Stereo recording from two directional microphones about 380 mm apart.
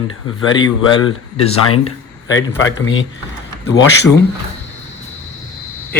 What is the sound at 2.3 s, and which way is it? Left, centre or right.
Speech, left.